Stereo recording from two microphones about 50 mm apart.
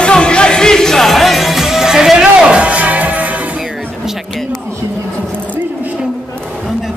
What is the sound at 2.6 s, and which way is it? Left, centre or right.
Music, right.